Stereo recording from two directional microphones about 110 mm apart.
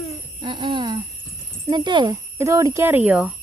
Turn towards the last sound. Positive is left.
turn(degrees=-10)  # may be behind; listen again after turning